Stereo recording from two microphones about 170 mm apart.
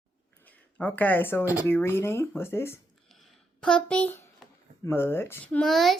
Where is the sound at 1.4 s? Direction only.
10° right (ahead or behind).